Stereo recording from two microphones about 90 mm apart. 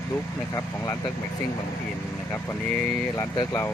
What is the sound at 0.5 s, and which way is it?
Speech, 40° left (ahead or behind).